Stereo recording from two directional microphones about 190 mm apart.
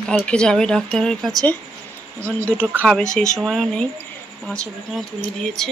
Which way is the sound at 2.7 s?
5° left (ahead or behind).